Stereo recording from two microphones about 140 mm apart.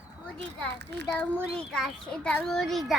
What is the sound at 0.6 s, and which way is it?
A child's voice, 10° left (ahead or behind).